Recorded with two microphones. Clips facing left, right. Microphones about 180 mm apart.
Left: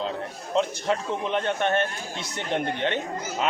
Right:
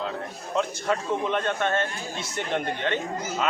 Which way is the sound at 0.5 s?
20° left (ahead or behind).